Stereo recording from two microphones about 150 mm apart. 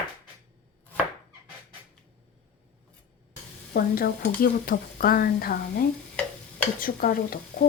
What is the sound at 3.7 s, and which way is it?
Speech, 75° left (ahead or behind).